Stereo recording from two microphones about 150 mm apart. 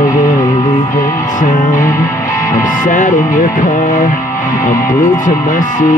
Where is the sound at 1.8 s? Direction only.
20° left (ahead or behind).